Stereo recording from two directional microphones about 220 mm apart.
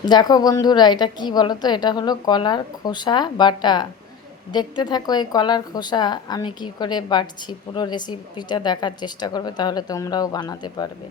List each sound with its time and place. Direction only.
0.0 s a woman's voice: 20° left (ahead or behind)